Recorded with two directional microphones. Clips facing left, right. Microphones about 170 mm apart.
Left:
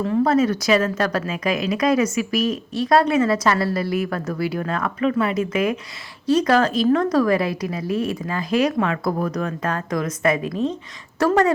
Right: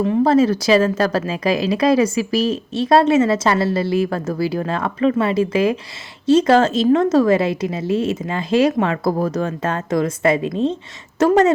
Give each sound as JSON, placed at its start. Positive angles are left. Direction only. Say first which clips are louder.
{"t": 0.0, "sound": "a woman's voice", "louder": "right 3 dB", "side_deg": -25}